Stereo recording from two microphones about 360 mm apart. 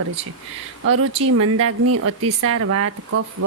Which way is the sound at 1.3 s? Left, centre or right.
Right.